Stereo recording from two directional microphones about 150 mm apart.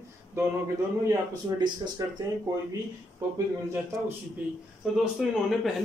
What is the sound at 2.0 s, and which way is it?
Speech, 25° right (ahead or behind).